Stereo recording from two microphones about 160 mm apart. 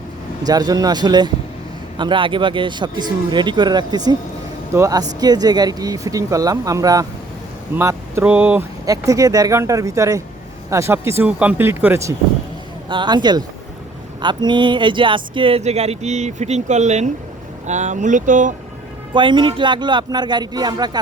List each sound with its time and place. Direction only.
0.4 s speech: 25° right (ahead or behind)
8.9 s speech: 20° right (ahead or behind)
12.9 s speech: 30° right (ahead or behind); by 18.5 s 55° right (ahead or behind)
19.1 s speech: 30° right (ahead or behind)